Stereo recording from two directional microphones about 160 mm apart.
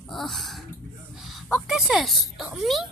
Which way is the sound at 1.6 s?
Centre (ahead or behind).